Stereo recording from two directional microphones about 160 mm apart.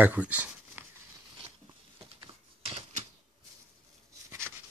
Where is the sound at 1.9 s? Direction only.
35° right (ahead or behind).